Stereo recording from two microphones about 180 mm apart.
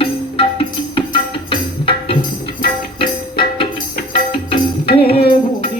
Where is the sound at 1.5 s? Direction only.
30° left (ahead or behind).